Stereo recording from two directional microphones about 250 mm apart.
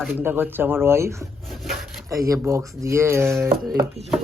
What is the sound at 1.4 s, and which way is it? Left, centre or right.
Wood, centre.